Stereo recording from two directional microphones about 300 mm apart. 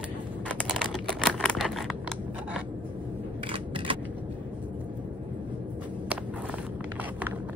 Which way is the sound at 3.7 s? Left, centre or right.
Centre.